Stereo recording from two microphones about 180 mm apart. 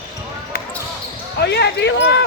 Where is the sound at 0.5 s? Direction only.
55° left (ahead or behind).